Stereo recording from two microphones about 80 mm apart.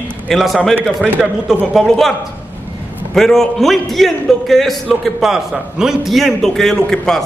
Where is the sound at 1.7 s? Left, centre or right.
Centre.